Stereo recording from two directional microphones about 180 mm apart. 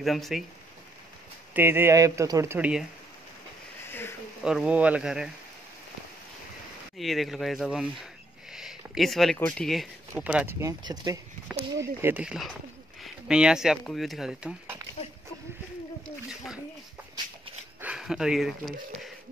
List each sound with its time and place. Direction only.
0.0 s speech: centre (ahead or behind)
1.5 s speech: 10° right (ahead or behind)
4.5 s speech: 5° right (ahead or behind)
7.0 s speech: centre (ahead or behind)
10.1 s speech: 10° right (ahead or behind)
17.7 s speech: 5° right (ahead or behind)